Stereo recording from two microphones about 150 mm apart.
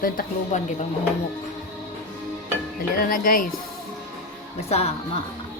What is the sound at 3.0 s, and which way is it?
Speech, 70° left (ahead or behind).